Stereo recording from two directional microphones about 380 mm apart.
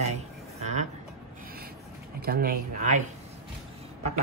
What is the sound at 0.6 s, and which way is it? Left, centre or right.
Speech, centre.